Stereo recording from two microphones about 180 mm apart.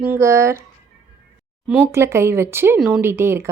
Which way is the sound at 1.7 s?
10° right (ahead or behind).